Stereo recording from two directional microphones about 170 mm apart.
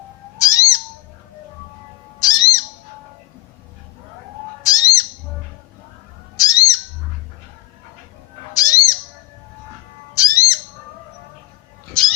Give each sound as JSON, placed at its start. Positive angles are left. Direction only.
{"t": 0.3, "sound": "bird", "side_deg": 20}
{"t": 2.2, "sound": "owl", "side_deg": 20}
{"t": 4.6, "sound": "bird", "side_deg": 20}
{"t": 6.3, "sound": "bird", "side_deg": 20}
{"t": 8.5, "sound": "owl", "side_deg": 20}
{"t": 10.2, "sound": "bird", "side_deg": 20}
{"t": 12.0, "sound": "pig", "side_deg": 5}